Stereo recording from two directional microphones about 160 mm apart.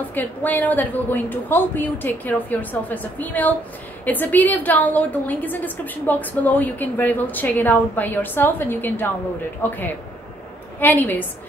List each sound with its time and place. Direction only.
0.1 s a woman's voice: 10° left (ahead or behind)
10.8 s a woman's voice: 10° left (ahead or behind)